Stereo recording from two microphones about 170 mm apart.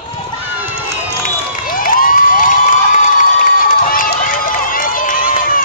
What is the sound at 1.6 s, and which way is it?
Cheering, 55° left (ahead or behind).